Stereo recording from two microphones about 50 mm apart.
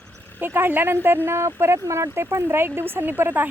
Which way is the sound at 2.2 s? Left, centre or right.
Right.